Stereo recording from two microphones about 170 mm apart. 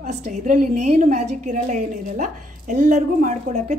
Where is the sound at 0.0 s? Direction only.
45° right (ahead or behind).